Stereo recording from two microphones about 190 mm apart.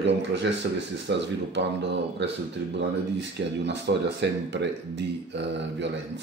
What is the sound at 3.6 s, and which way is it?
Speech, 65° right (ahead or behind).